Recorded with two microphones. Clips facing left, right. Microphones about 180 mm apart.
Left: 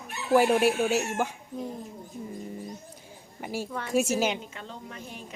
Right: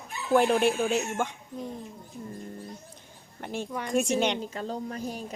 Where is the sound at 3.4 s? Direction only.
5° left (ahead or behind).